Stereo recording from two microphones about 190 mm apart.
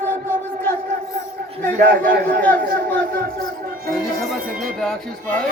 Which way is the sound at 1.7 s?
50° right (ahead or behind).